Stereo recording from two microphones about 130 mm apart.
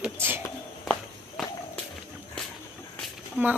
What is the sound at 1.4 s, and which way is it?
Walk, 5° right (ahead or behind).